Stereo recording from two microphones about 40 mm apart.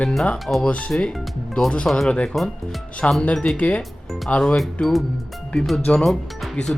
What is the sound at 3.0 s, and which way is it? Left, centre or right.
Speech, left.